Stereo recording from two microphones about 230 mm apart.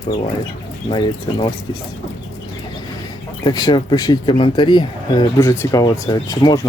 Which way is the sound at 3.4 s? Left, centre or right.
Centre.